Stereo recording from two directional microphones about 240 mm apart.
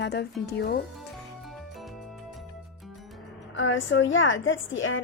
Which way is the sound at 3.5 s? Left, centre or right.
Left.